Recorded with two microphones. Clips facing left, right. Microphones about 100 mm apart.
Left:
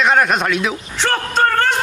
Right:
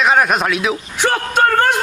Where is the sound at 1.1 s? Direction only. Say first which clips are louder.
Right 2 dB; 15° right (ahead or behind).